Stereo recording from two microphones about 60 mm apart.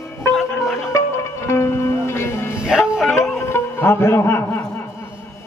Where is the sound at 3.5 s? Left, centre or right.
Left.